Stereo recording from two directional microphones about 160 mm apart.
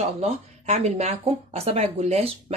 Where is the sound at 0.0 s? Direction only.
40° right (ahead or behind).